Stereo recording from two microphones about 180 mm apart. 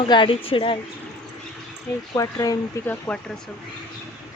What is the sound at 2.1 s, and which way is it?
Speech, 20° left (ahead or behind).